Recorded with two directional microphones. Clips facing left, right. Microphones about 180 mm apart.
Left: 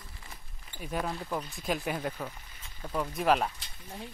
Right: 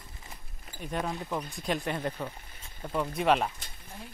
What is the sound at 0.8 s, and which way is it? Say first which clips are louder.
Speech: right 1 dB; centre (ahead or behind).